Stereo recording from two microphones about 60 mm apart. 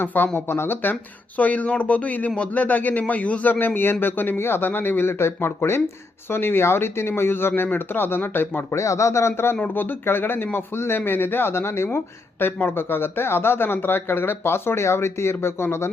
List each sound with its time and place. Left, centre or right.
0.0 s speech: left
4.0 s speech: left
8.7 s speech: left
9.6 s speech: left